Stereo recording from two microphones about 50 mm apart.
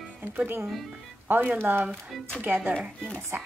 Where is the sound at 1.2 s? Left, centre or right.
Right.